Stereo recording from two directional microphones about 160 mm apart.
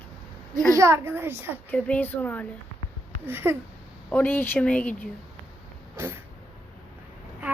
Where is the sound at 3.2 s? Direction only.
15° right (ahead or behind).